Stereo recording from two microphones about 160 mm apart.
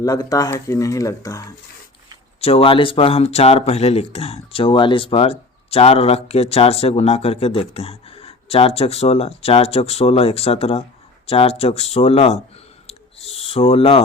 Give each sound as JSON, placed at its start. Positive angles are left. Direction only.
{"t": 0.0, "sound": "speech", "side_deg": 20}
{"t": 2.4, "sound": "speech", "side_deg": 35}
{"t": 12.9, "sound": "a sound", "side_deg": 40}